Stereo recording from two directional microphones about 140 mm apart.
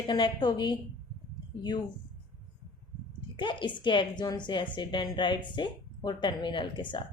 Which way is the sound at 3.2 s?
35° left (ahead or behind).